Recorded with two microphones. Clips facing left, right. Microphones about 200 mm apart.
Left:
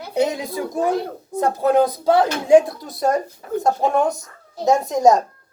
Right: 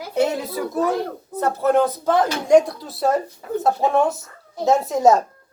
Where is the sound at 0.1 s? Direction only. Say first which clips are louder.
Even; 15° left (ahead or behind); by 5.2 s 5° right (ahead or behind).